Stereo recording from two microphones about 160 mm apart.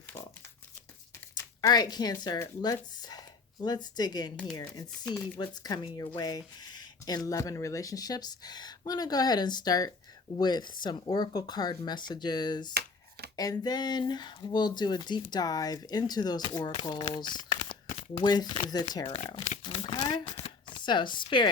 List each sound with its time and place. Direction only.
1.6 s a woman's voice: 25° left (ahead or behind)
12.7 s shuffling cards: 80° right
13.3 s speech: 25° left (ahead or behind)
17.7 s shuffling cards: 30° left (ahead or behind)
18.6 s speech: 25° left (ahead or behind)
19.3 s tearing: 35° left (ahead or behind)
20.2 s speech: 40° left (ahead or behind)